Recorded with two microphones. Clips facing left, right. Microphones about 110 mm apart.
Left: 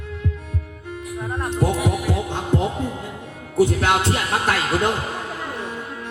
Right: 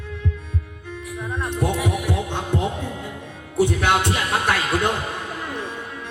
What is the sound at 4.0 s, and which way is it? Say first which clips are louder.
Music: left 1 dB; 35° left (ahead or behind).